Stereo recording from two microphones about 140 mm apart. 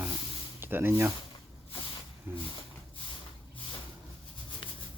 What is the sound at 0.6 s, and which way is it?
Speech, 15° right (ahead or behind).